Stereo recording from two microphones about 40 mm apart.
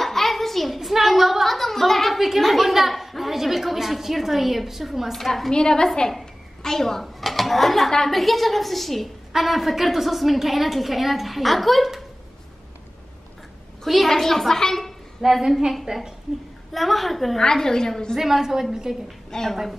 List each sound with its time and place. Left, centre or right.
0.0 s a sound: centre
0.7 s a woman's voice: centre
5.1 s a woman's voice: centre
5.5 s a woman's voice: centre
13.8 s a woman's voice: centre
15.2 s a woman's voice: centre
16.7 s a woman's voice: centre
17.4 s a woman's voice: centre
18.1 s a woman's voice: centre
19.3 s a woman's voice: centre